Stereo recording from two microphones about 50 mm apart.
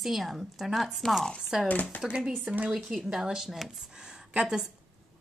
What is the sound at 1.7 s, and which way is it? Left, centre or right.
Speech, left.